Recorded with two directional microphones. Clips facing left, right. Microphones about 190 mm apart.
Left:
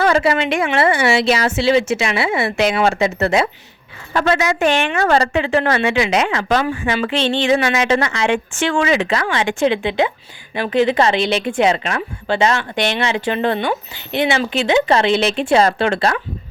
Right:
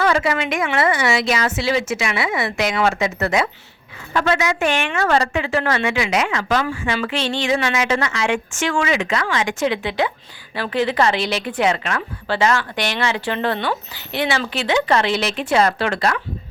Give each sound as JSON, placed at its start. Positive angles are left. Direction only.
{"t": 0.0, "sound": "a woman's voice", "side_deg": 30}